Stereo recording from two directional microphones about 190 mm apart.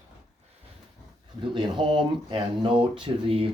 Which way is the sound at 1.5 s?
25° right (ahead or behind).